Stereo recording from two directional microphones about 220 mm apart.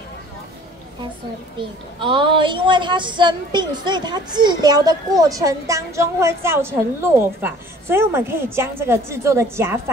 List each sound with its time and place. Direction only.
1.6 s a woman's voice: 20° right (ahead or behind)